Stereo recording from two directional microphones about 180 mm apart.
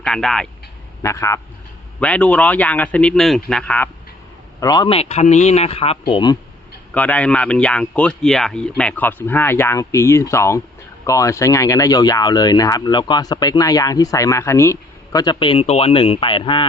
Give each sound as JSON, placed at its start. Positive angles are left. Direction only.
{"t": 0.0, "sound": "speech", "side_deg": 5}
{"t": 1.0, "sound": "speech", "side_deg": 15}
{"t": 4.6, "sound": "speech", "side_deg": 25}
{"t": 6.9, "sound": "speech", "side_deg": 10}